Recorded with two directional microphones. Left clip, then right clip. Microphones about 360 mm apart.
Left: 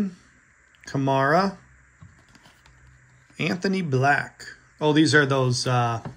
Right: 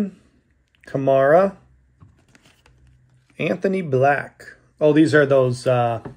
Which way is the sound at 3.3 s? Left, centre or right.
Centre.